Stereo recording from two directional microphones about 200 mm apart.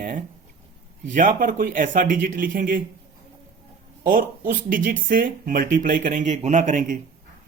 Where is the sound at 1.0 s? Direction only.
40° right (ahead or behind).